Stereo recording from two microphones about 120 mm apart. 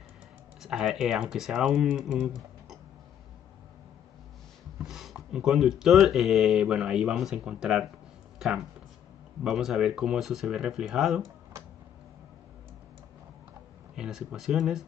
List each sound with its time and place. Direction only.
0.6 s speech: 5° right (ahead or behind)
4.8 s speech: 5° right (ahead or behind)
9.4 s speech: 5° right (ahead or behind)
13.9 s speech: 5° right (ahead or behind)